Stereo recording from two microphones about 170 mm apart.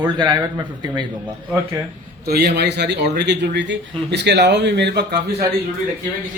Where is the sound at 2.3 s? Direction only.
75° right (ahead or behind); by 5.0 s 90° right.